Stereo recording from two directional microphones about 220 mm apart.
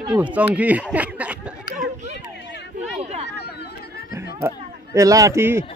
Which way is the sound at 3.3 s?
45° left (ahead or behind).